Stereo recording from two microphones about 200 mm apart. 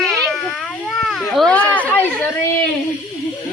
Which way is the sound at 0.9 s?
Centre (ahead or behind).